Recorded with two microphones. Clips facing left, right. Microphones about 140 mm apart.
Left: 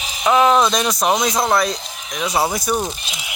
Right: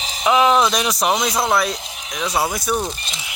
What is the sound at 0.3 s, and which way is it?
Speech, centre (ahead or behind).